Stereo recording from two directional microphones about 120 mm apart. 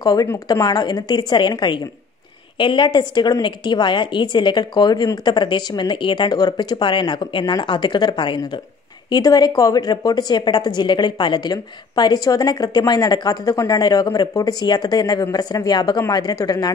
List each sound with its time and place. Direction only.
0.0 s a woman's voice: 30° left (ahead or behind)